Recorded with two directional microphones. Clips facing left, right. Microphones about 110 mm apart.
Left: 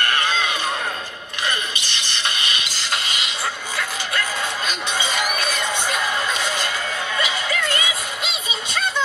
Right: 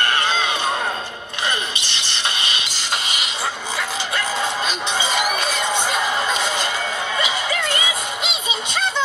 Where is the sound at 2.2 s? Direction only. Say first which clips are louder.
Right 1 dB; 25° right (ahead or behind).